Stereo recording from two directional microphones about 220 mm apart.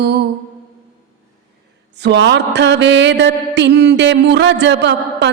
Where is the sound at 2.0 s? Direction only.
50° right (ahead or behind).